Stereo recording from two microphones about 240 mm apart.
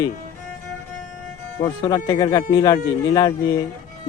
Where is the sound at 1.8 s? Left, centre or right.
Centre.